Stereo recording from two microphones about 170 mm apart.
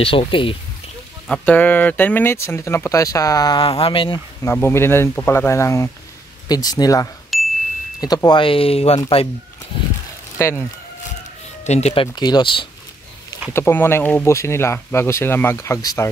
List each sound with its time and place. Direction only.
0.0 s speech: 30° left (ahead or behind)
1.2 s speech: 5° left (ahead or behind); by 4.2 s 30° left (ahead or behind)
4.4 s speech: 15° left (ahead or behind)
7.3 s ding: centre (ahead or behind)
8.0 s speech: 25° left (ahead or behind)
10.3 s speech: 15° left (ahead or behind)
11.6 s speech: 40° left (ahead or behind)
13.5 s speech: 15° left (ahead or behind)